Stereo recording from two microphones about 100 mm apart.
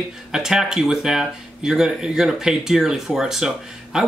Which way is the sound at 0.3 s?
5° right (ahead or behind).